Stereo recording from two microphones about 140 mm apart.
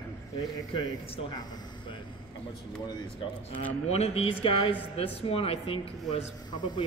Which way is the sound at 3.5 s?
10° left (ahead or behind).